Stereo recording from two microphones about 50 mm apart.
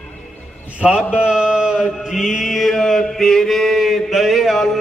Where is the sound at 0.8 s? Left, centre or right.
Right.